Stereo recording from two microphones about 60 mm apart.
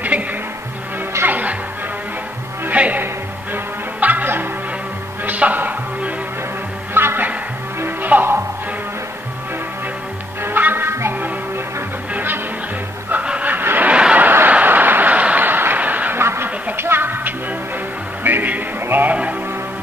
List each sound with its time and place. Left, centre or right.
0.1 s music: right
2.7 s music: right
6.9 s music: right
10.4 s music: right
12.1 s music: right
13.1 s vehicle: right
13.9 s a sound: centre
14.2 s a sound: right
16.2 s a sound: right
16.7 s music: right